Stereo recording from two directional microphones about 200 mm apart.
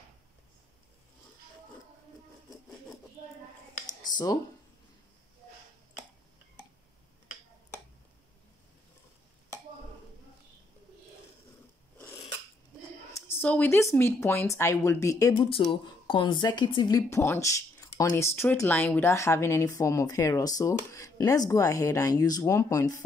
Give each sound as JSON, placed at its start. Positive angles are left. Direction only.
{"t": 13.3, "sound": "speech", "side_deg": 10}